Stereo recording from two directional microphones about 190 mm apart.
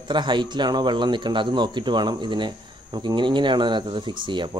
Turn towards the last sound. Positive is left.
turn(degrees=-25)  # may be behind; listen again after turning